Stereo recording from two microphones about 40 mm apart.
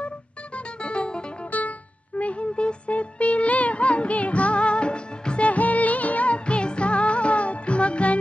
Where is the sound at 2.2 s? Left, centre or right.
Left.